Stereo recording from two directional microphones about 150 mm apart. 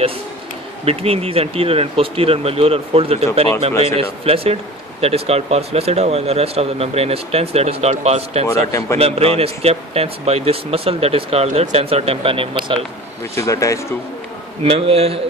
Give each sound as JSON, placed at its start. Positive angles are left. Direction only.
{"t": 0.8, "sound": "speech", "side_deg": -40}
{"t": 13.3, "sound": "speech", "side_deg": 20}
{"t": 14.7, "sound": "speech", "side_deg": -40}